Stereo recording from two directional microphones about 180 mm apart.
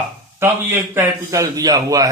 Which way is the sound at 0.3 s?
15° right (ahead or behind).